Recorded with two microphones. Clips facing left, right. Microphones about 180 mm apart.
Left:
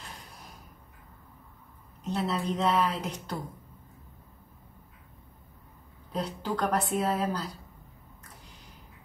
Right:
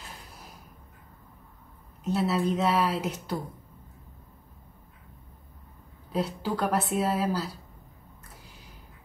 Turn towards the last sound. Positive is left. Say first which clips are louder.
# right 2 dB
turn(degrees=-5)  # may be behind; listen again after turning